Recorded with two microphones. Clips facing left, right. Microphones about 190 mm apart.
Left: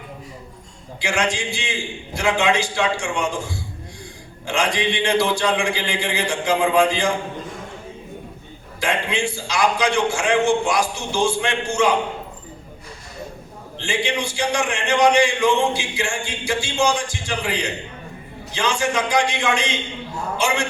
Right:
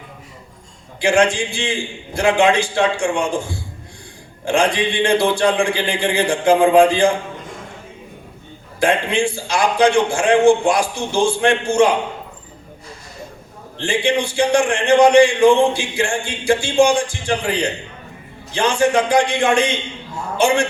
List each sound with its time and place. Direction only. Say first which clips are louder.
1.0 s a man's voice: right 7 dB; 55° right (ahead or behind)
4.4 s a man's voice: right 5 dB; 55° right (ahead or behind)
8.8 s a man's voice: right 6 dB; 55° right (ahead or behind)
13.7 s a man's voice: right 6 dB; 55° right (ahead or behind)